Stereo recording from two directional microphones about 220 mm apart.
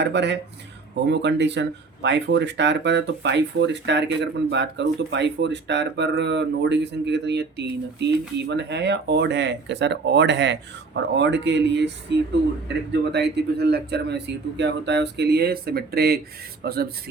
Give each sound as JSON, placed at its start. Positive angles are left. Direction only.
{"t": 0.0, "sound": "speech", "side_deg": -50}